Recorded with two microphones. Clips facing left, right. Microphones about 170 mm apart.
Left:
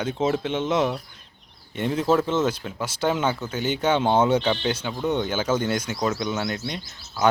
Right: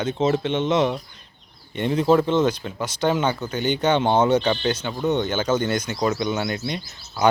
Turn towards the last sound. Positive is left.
turn(degrees=0)  # may be behind; listen again after turning